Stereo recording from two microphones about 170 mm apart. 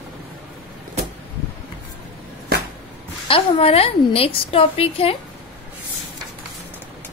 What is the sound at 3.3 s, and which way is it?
A woman's voice, 35° left (ahead or behind).